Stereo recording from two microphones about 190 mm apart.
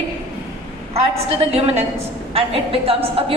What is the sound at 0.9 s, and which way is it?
A woman's voice, 30° right (ahead or behind).